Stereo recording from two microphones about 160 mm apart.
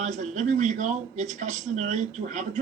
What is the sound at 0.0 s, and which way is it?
A man's voice, 50° right (ahead or behind).